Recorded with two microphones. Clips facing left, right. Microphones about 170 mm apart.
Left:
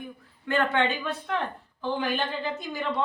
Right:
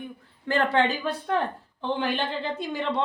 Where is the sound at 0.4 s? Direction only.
35° right (ahead or behind).